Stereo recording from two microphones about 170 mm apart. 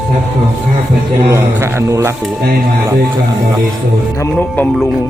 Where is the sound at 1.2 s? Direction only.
15° right (ahead or behind).